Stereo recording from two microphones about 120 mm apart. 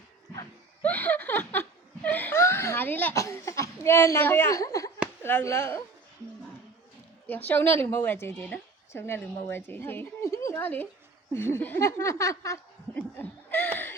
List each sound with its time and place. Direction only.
0.8 s a sound: 15° left (ahead or behind)
3.2 s a woman's voice: 25° left (ahead or behind)
7.3 s a woman's voice: 15° left (ahead or behind)
12.9 s chuckle: 15° left (ahead or behind)